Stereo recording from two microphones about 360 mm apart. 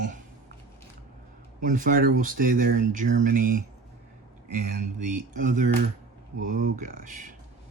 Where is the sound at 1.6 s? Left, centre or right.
Right.